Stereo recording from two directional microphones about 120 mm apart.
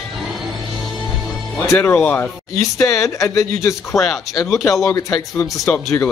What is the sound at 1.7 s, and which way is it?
Speech, 15° left (ahead or behind).